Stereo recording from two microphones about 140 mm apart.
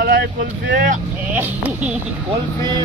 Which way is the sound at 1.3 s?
10° right (ahead or behind).